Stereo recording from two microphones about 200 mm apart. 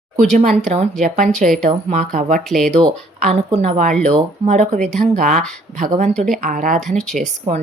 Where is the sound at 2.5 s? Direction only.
Centre (ahead or behind).